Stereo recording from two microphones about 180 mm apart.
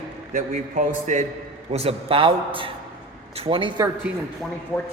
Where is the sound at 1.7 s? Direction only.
35° right (ahead or behind).